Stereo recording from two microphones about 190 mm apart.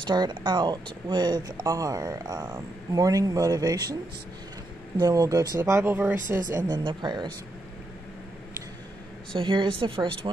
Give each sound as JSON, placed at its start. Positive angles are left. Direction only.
{"t": 0.0, "sound": "speech", "side_deg": -25}
{"t": 4.9, "sound": "speech", "side_deg": -20}
{"t": 6.5, "sound": "speech", "side_deg": -25}
{"t": 9.3, "sound": "speech", "side_deg": -25}